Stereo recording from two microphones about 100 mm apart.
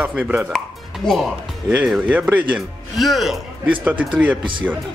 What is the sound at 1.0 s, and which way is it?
Speech, 5° left (ahead or behind).